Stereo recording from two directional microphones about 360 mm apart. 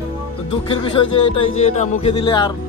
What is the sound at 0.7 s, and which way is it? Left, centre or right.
Speech, centre.